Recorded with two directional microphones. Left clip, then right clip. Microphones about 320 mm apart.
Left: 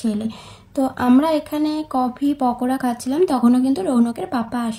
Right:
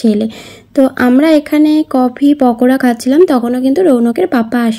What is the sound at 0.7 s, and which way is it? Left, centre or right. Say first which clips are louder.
Speech: right 8 dB; left.